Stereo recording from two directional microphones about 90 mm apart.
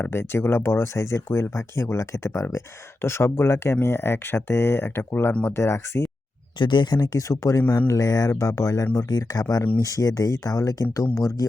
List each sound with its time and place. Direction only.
0.0 s speech: 25° left (ahead or behind)
6.6 s speech: 60° left (ahead or behind); by 11.4 s 35° left (ahead or behind)